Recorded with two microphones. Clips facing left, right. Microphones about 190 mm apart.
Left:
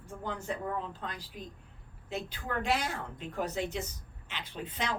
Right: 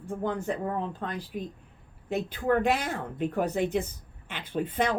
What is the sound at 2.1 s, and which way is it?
A woman's voice, 55° right (ahead or behind).